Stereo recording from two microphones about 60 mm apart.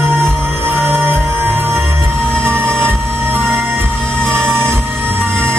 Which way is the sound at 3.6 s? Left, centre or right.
Right.